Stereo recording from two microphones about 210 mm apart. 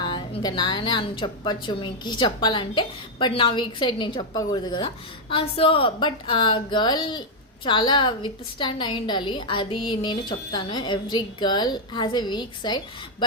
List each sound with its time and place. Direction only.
0.0 s a woman's voice: 20° left (ahead or behind)